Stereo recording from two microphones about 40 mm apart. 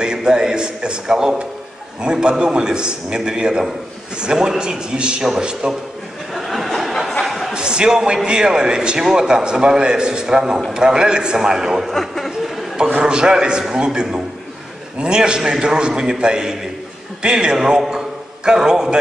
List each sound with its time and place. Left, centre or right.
0.0 s a man's voice: right
6.3 s a sound: centre
7.5 s a man's voice: right
11.9 s speech: centre
12.7 s a man's voice: right